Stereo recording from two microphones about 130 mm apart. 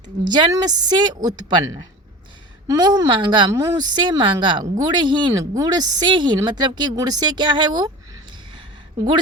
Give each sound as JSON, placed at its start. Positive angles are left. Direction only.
{"t": 0.3, "sound": "a woman's voice", "side_deg": -30}